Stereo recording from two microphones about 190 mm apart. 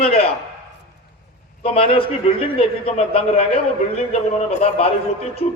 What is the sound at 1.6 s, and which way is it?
A man's voice, 30° left (ahead or behind).